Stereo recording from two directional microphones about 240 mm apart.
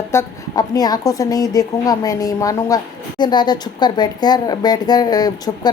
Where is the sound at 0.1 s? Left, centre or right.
Centre.